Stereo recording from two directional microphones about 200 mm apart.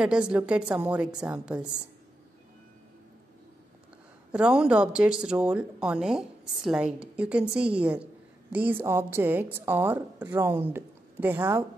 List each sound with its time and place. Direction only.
0.0 s speech: 5° right (ahead or behind)
4.3 s speech: 5° right (ahead or behind)